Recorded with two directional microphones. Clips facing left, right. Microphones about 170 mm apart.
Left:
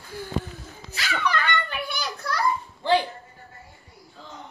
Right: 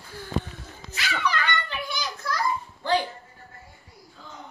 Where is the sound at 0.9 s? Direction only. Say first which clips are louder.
Left 1 dB; 50° left (ahead or behind).